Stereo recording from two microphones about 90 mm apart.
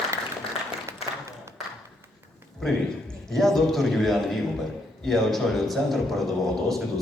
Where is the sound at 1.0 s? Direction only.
90° left.